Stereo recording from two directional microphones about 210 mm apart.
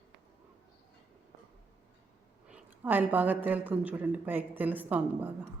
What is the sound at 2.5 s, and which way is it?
A woman's voice, 10° right (ahead or behind).